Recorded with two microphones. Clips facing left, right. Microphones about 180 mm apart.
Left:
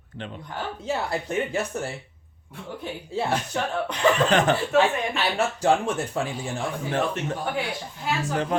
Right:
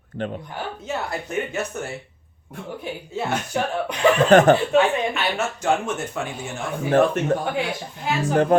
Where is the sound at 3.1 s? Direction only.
30° left (ahead or behind).